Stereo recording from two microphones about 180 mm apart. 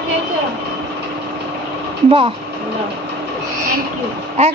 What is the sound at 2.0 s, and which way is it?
Speech, 30° right (ahead or behind).